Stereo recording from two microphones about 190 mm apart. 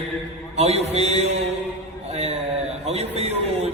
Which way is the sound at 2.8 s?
35° right (ahead or behind).